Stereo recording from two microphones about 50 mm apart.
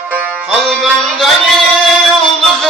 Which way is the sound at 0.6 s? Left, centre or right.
Centre.